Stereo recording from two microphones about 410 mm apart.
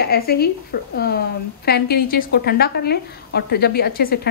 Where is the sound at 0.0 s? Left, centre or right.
Left.